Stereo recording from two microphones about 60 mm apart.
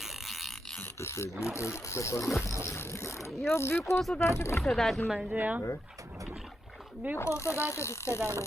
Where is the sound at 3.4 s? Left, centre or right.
Left.